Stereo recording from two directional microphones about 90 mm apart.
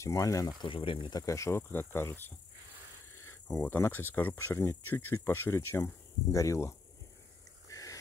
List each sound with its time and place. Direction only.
0.0 s speech: 40° left (ahead or behind)
0.6 s speech: 75° left (ahead or behind)
1.1 s speech: 40° left (ahead or behind)
3.6 s speech: 20° left (ahead or behind)
7.6 s a sound: 40° left (ahead or behind)